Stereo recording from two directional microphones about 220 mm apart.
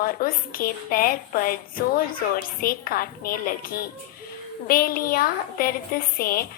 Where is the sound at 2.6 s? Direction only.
40° left (ahead or behind).